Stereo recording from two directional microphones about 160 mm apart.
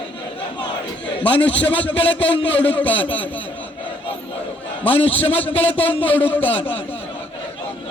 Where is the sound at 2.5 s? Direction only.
35° left (ahead or behind).